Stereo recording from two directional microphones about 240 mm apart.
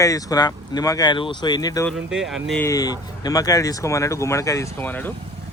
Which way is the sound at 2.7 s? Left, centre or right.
Centre.